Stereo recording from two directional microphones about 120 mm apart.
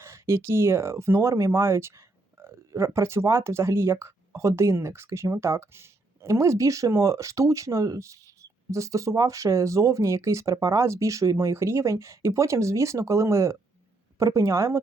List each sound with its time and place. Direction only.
0.0 s speech: 20° right (ahead or behind)